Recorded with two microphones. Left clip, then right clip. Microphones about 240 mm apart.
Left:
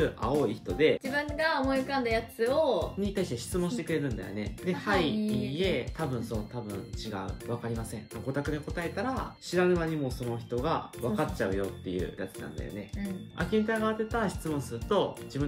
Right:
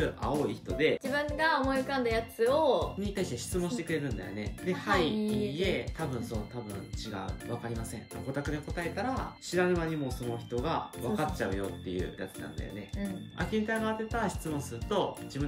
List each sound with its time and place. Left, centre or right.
0.0 s speech: centre
1.3 s speech: centre
13.4 s speech: centre